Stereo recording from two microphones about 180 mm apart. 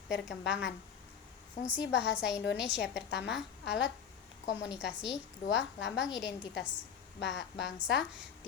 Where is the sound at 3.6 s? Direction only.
70° left (ahead or behind).